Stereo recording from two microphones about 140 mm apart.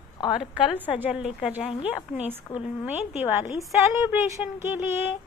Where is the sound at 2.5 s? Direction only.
20° left (ahead or behind).